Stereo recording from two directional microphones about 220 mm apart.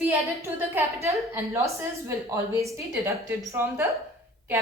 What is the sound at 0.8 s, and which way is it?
A woman's voice, 15° right (ahead or behind).